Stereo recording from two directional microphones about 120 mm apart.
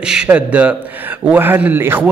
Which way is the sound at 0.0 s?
5° right (ahead or behind).